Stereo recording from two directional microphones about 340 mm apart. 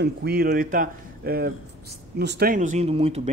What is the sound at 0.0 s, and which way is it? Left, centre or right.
Speech, right.